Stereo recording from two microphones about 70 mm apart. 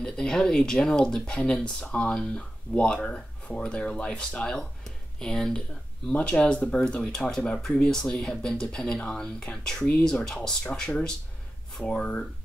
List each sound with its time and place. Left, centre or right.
0.0 s speech: centre